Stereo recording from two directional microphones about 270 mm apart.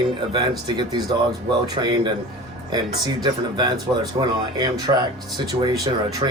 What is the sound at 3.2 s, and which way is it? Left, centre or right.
Speech, centre.